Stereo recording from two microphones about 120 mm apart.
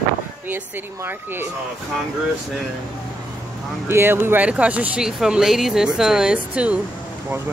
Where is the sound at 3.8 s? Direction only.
20° right (ahead or behind).